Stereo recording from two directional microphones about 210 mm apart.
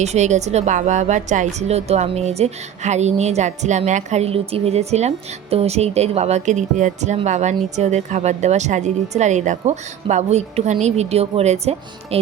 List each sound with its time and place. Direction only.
0.0 s a woman's voice: 35° right (ahead or behind)